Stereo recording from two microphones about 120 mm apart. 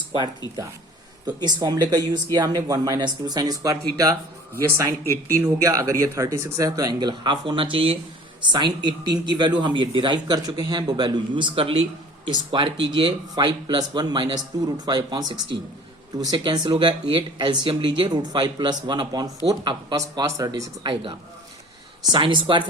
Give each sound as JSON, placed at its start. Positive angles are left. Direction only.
{"t": 1.4, "sound": "speech", "side_deg": -35}
{"t": 4.9, "sound": "speech", "side_deg": 20}
{"t": 5.4, "sound": "speech", "side_deg": -25}
{"t": 14.5, "sound": "speech", "side_deg": -35}
{"t": 16.7, "sound": "speech", "side_deg": -50}
{"t": 20.0, "sound": "speech", "side_deg": -25}
{"t": 20.5, "sound": "speech", "side_deg": -40}